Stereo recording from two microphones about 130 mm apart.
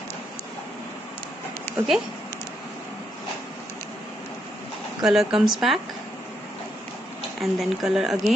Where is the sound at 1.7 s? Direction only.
15° left (ahead or behind).